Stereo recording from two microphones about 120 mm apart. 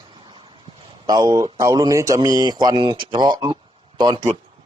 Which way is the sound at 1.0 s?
30° right (ahead or behind).